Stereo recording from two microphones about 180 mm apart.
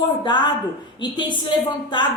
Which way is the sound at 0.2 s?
25° left (ahead or behind).